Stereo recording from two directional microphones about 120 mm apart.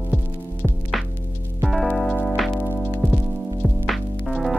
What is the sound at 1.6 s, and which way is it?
Music, centre (ahead or behind).